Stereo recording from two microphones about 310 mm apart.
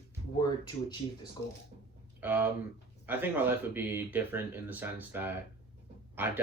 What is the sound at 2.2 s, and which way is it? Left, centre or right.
Speech, centre.